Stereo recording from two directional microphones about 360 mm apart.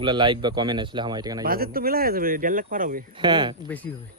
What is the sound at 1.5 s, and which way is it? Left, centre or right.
Speech, right.